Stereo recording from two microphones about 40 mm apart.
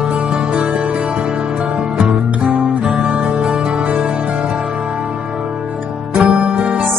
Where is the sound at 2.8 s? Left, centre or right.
Centre.